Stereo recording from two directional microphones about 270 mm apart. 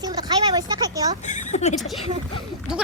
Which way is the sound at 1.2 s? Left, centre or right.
Left.